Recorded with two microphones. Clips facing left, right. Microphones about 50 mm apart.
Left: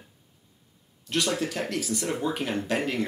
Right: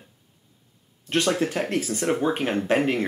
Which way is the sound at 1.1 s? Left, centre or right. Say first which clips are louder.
Right 4 dB; right.